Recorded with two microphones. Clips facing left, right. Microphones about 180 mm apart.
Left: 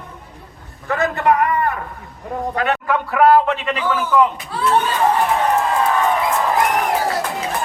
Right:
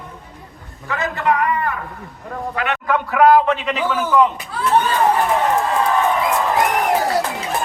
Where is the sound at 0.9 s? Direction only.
50° left (ahead or behind).